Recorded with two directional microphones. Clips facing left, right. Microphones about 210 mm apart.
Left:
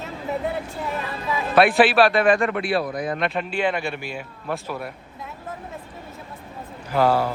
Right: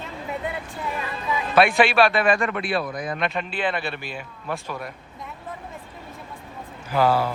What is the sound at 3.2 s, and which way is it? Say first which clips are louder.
Speech: left 1 dB; centre (ahead or behind).